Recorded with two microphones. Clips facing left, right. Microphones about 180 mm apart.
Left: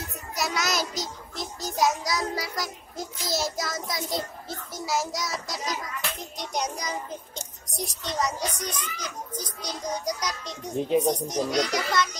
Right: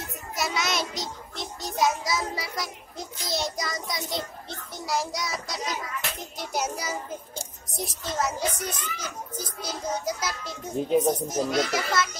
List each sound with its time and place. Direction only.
0.0 s a child's voice: centre (ahead or behind)